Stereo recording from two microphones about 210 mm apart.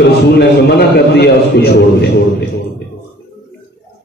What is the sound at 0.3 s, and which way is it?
A man's voice, 50° left (ahead or behind).